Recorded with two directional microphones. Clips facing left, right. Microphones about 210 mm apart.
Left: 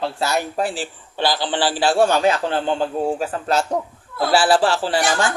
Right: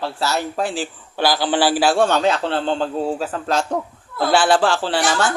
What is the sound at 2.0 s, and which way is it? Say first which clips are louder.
A man's voice: left 1 dB; 10° left (ahead or behind).